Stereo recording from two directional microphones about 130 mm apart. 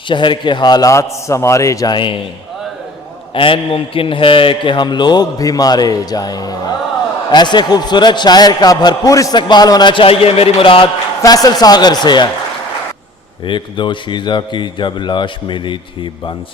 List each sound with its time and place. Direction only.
0.1 s a man's voice: 40° left (ahead or behind)
3.3 s a man's voice: 40° left (ahead or behind)
11.2 s a man's voice: 30° left (ahead or behind)
13.4 s a man's voice: 40° left (ahead or behind)